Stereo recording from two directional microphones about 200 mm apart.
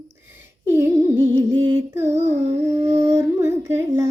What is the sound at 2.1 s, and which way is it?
Child singing, 35° right (ahead or behind).